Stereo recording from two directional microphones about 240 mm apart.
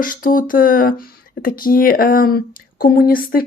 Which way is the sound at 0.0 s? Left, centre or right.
Left.